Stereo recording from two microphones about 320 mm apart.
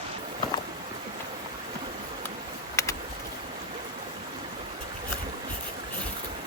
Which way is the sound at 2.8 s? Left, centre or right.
Centre.